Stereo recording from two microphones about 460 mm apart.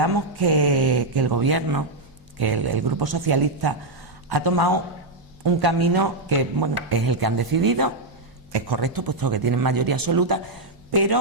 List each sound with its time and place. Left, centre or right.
0.0 s a man's voice: right